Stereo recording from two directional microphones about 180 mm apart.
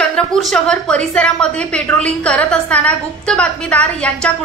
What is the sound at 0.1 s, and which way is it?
A woman's voice, centre (ahead or behind).